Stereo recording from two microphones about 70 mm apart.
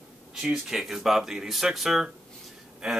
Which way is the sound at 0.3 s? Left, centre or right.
Centre.